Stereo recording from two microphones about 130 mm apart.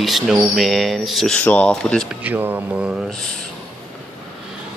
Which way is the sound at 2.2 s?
15° right (ahead or behind).